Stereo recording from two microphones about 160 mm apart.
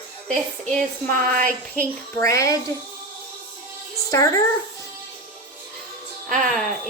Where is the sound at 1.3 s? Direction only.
60° right (ahead or behind).